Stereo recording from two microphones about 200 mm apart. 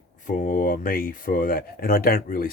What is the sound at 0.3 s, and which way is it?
Speech, 45° left (ahead or behind).